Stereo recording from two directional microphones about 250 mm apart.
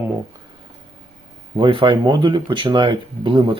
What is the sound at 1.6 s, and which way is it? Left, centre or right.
Speech, centre.